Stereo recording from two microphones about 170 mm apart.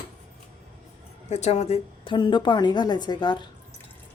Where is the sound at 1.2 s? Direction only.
40° left (ahead or behind); by 3.5 s 25° left (ahead or behind).